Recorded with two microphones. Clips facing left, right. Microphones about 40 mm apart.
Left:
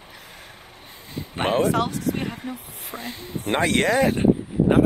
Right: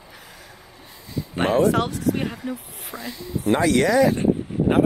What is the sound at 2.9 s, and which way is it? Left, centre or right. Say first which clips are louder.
Speech: right 2 dB; left.